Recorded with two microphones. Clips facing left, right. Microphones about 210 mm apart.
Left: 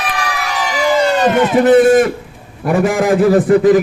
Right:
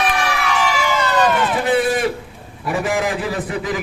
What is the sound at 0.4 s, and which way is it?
Emergency vehicle, 40° left (ahead or behind).